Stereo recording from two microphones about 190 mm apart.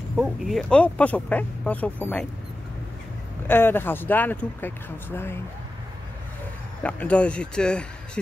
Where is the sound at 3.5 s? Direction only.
10° left (ahead or behind).